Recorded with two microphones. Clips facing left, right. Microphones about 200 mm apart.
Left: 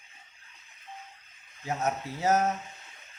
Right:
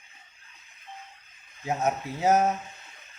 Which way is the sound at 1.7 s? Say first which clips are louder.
Right 3 dB; 15° right (ahead or behind).